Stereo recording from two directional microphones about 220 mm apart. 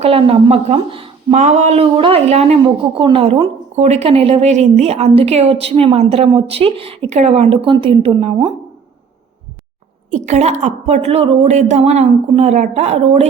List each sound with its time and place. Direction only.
0.0 s speech: 25° right (ahead or behind)
10.1 s speech: 30° right (ahead or behind)